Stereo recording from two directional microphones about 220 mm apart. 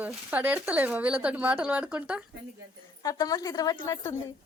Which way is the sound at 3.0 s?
15° left (ahead or behind).